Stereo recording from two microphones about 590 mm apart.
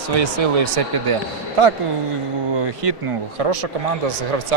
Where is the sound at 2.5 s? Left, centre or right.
Right.